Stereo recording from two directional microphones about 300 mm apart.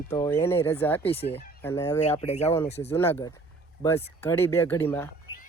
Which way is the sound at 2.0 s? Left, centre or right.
Left.